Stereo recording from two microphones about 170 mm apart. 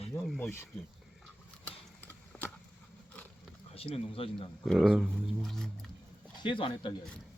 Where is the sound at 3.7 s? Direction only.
35° left (ahead or behind).